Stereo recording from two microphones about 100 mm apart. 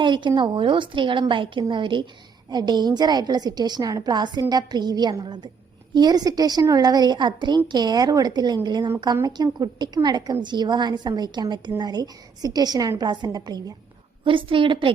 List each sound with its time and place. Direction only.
0.0 s a woman's voice: 50° right (ahead or behind)
14.3 s a woman's voice: 60° right (ahead or behind)